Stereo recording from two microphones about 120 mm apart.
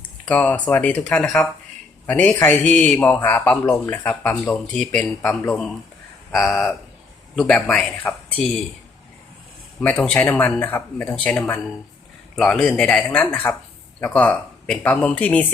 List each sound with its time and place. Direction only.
0.3 s speech: 10° left (ahead or behind)
6.3 s speech: centre (ahead or behind)
9.8 s speech: 10° left (ahead or behind)